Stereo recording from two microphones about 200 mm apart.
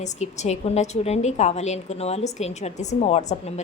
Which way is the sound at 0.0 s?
35° left (ahead or behind).